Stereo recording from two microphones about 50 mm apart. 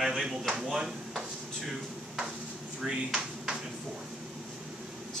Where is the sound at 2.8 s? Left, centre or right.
Centre.